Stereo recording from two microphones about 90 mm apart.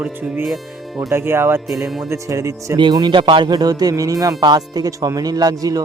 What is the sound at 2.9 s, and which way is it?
Speech, 50° right (ahead or behind).